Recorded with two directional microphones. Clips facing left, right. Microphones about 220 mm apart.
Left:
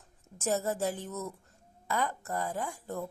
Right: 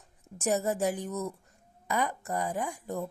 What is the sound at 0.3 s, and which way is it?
Speech, 15° right (ahead or behind).